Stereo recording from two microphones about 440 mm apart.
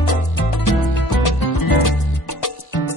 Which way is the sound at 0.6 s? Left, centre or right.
Left.